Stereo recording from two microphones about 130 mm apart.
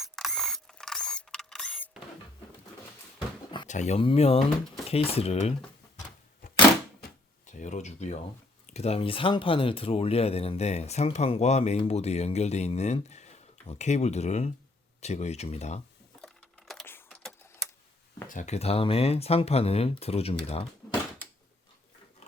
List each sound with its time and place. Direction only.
0.0 s mechanisms: centre (ahead or behind)
3.7 s speech: 60° left (ahead or behind)
4.0 s speech: 50° left (ahead or behind)
7.4 s a sound: 65° left (ahead or behind)
8.6 s speech: 55° left (ahead or behind)
16.2 s a sound: 5° left (ahead or behind)
16.8 s typing: 15° left (ahead or behind)
18.3 s speech: 70° left (ahead or behind); by 20.7 s 50° left (ahead or behind)